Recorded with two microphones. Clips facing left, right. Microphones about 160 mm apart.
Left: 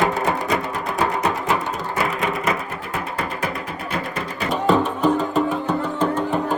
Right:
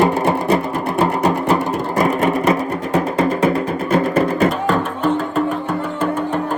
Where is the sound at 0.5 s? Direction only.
35° right (ahead or behind).